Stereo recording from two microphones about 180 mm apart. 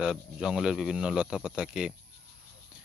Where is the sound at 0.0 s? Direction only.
5° right (ahead or behind).